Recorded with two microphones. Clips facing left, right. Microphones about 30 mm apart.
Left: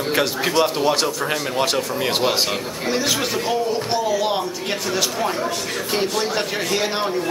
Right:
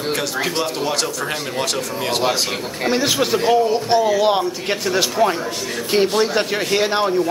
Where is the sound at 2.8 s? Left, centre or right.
Centre.